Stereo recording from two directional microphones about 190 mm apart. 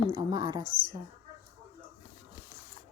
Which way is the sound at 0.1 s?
20° right (ahead or behind).